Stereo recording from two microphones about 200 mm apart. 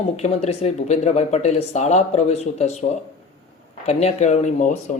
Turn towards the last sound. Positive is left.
turn(degrees=35)  # may be behind; listen again after turning